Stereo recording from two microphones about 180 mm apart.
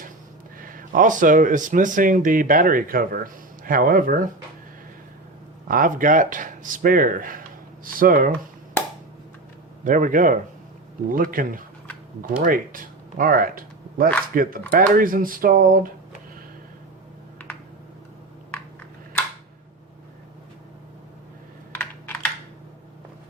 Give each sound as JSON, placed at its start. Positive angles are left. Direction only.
{"t": 0.6, "sound": "speech", "side_deg": -50}
{"t": 5.6, "sound": "speech", "side_deg": -50}
{"t": 9.8, "sound": "speech", "side_deg": -50}
{"t": 21.7, "sound": "computer keyboard", "side_deg": 10}